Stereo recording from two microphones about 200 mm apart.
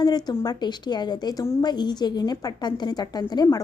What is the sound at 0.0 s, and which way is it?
A woman's voice, 20° left (ahead or behind).